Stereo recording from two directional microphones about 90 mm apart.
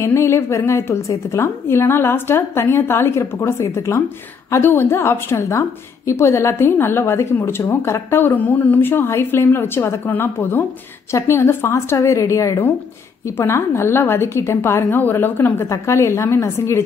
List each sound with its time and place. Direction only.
0.0 s a woman's voice: 30° left (ahead or behind)